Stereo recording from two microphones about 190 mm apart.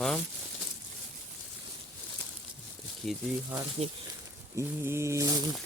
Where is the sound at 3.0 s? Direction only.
Centre (ahead or behind).